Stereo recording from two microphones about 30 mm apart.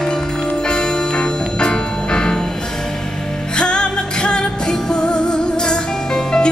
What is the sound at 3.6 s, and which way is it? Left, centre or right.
Music, left.